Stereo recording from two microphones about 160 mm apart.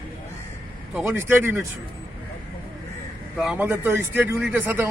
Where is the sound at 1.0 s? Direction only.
15° right (ahead or behind).